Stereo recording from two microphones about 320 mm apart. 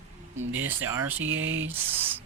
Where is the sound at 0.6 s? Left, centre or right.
Centre.